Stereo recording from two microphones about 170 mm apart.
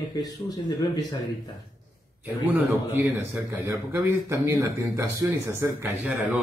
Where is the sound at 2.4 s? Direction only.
15° right (ahead or behind).